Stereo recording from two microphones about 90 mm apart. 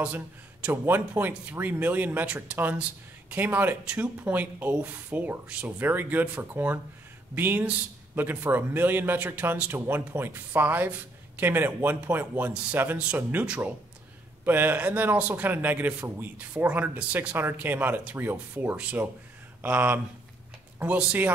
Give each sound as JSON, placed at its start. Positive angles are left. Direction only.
{"t": 0.7, "sound": "a man's voice", "side_deg": -20}